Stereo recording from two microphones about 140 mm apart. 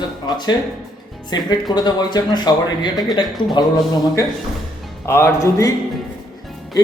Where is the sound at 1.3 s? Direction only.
30° left (ahead or behind).